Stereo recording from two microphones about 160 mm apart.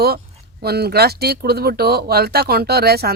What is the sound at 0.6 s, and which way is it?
Speech, 80° right.